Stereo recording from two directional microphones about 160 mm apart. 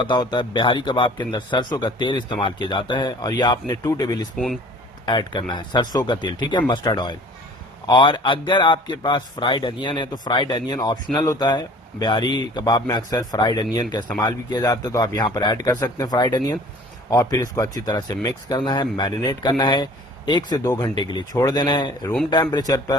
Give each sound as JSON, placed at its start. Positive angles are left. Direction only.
{"t": 0.0, "sound": "speech", "side_deg": 30}
{"t": 4.4, "sound": "speech", "side_deg": 0}
{"t": 5.0, "sound": "speech", "side_deg": 30}